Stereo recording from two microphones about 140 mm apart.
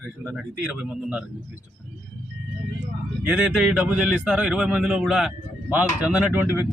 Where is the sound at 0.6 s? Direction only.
5° right (ahead or behind).